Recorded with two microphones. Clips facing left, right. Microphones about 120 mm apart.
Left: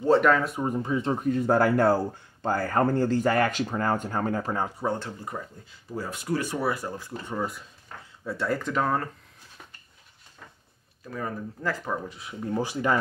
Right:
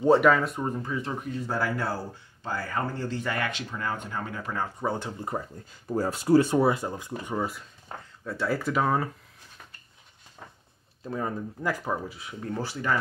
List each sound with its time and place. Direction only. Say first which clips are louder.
0.0 s speech: right 1 dB; 15° right (ahead or behind)
0.3 s speech: left 1 dB; centre (ahead or behind)
0.7 s speech: left 4 dB; 20° left (ahead or behind)
1.3 s speech: left 8 dB; 55° left (ahead or behind); by 4.6 s 40° left (ahead or behind)
4.8 s speech: even; centre (ahead or behind)
5.3 s speech: right 3 dB; 35° right (ahead or behind); by 7.3 s 20° right (ahead or behind)
7.3 s speech: even; centre (ahead or behind)
11.1 s speech: right 2 dB; 25° right (ahead or behind)
11.6 s speech: right 1 dB; 10° right (ahead or behind)
12.5 s speech: left 5 dB; 15° left (ahead or behind)